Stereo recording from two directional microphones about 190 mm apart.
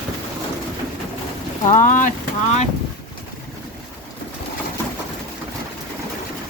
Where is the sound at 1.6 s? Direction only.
45° left (ahead or behind).